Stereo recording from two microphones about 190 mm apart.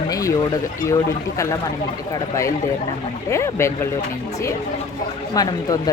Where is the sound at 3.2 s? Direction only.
15° left (ahead or behind).